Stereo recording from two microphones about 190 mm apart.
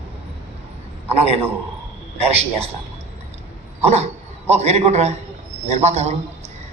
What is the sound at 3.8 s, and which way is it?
A man's voice, 35° right (ahead or behind).